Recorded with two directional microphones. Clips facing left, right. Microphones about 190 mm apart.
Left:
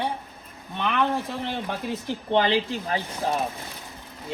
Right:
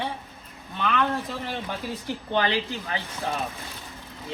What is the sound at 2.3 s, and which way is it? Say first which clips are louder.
Speech: left 4 dB; 30° left (ahead or behind).